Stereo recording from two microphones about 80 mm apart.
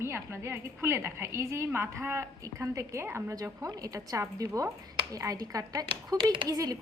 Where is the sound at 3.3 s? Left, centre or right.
Right.